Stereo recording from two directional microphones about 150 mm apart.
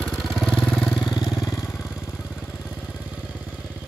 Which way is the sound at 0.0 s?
Centre (ahead or behind).